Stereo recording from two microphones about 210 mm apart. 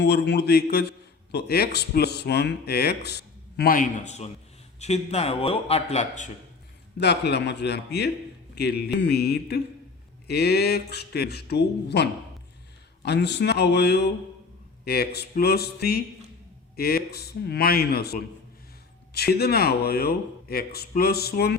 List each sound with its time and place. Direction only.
0.0 s a man's voice: 55° left (ahead or behind); by 6.3 s 35° left (ahead or behind)
7.0 s a man's voice: 55° left (ahead or behind)